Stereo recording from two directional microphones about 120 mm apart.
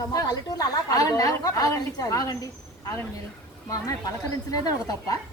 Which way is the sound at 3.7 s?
30° left (ahead or behind).